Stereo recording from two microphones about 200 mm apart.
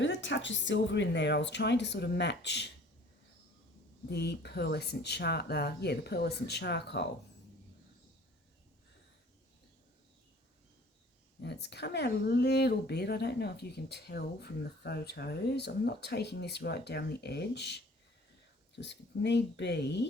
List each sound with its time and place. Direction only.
0.0 s speech: 65° left (ahead or behind)
4.1 s speech: 55° left (ahead or behind)
11.3 s speech: 55° left (ahead or behind)
18.8 s speech: 60° left (ahead or behind)